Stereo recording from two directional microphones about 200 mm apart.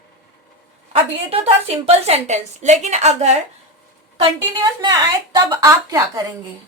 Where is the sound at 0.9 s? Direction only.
30° right (ahead or behind).